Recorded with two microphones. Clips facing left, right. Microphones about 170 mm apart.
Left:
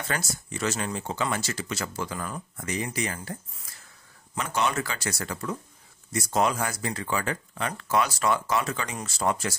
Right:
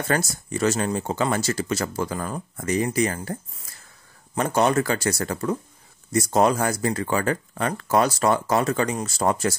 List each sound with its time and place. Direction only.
0.1 s speech: 40° right (ahead or behind)
4.4 s speech: 40° right (ahead or behind)